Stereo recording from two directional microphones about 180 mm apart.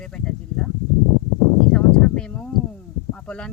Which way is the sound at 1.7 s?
5° left (ahead or behind).